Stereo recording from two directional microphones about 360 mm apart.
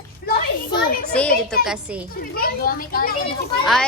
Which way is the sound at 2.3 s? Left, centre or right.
Left.